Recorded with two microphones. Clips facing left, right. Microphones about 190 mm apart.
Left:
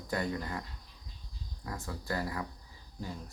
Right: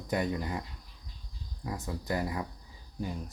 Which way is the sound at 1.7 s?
20° right (ahead or behind).